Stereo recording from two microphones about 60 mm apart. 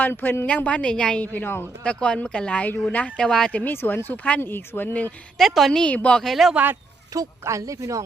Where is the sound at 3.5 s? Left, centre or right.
Left.